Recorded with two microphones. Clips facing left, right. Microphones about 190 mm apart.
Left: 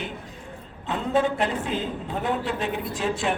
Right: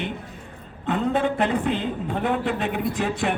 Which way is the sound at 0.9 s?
55° right (ahead or behind).